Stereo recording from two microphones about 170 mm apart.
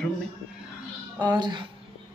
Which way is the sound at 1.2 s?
25° right (ahead or behind).